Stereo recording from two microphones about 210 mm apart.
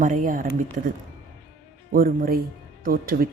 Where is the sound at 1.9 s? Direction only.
40° right (ahead or behind).